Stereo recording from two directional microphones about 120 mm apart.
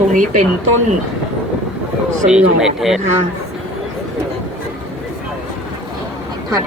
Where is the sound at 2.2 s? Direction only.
5° right (ahead or behind).